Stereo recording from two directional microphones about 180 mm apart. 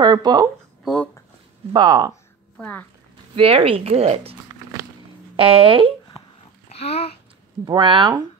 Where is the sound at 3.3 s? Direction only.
30° right (ahead or behind).